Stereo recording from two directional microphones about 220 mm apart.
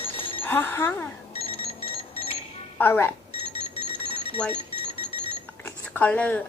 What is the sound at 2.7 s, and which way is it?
Speech, 10° left (ahead or behind).